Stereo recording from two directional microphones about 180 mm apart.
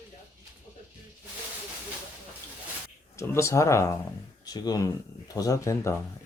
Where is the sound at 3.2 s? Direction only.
15° left (ahead or behind).